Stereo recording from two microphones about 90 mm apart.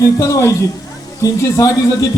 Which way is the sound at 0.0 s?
30° left (ahead or behind).